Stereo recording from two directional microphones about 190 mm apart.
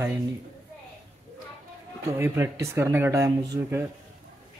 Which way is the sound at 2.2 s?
15° right (ahead or behind).